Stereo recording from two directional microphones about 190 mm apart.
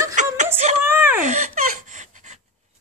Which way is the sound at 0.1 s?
40° right (ahead or behind).